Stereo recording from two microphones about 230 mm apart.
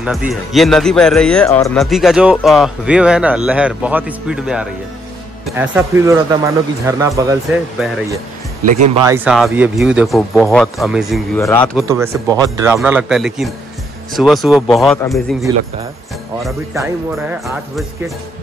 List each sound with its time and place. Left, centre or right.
0.0 s speech: centre
8.6 s speech: right
8.9 s speech: centre
11.7 s speech: centre
15.5 s speech: centre
16.7 s speech: centre